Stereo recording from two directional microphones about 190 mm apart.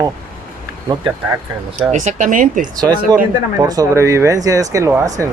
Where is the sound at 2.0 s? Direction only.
40° right (ahead or behind).